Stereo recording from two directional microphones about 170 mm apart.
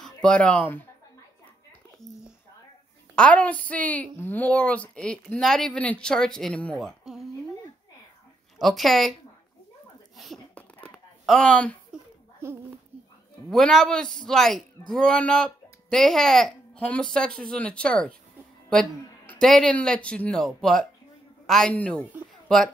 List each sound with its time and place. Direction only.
0.0 s speech: 5° left (ahead or behind)
3.2 s a woman's voice: 10° left (ahead or behind)
8.5 s speech: centre (ahead or behind)
10.1 s whispering: centre (ahead or behind)
11.2 s a woman's voice: 5° left (ahead or behind)
11.9 s a sound: 5° right (ahead or behind)
12.4 s a child's voice: 15° right (ahead or behind)
13.5 s speech: centre (ahead or behind)
18.7 s music: 5° left (ahead or behind)
19.4 s speech: 5° left (ahead or behind)